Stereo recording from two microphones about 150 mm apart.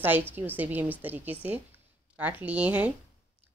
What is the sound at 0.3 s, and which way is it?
Speech, 10° right (ahead or behind).